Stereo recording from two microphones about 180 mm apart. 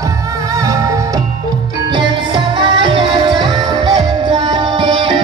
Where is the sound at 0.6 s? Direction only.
20° right (ahead or behind).